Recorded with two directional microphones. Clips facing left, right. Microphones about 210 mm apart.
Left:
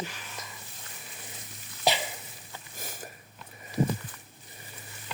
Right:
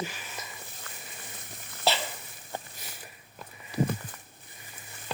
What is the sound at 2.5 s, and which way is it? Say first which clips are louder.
Sniff: right 10 dB; 50° right (ahead or behind).